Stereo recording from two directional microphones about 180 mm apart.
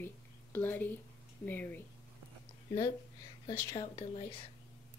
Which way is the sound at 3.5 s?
20° left (ahead or behind).